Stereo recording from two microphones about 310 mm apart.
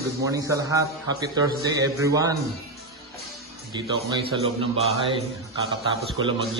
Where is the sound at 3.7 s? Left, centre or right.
Centre.